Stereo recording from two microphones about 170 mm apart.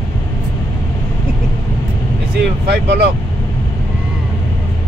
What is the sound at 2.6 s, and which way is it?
Speech, 75° right (ahead or behind).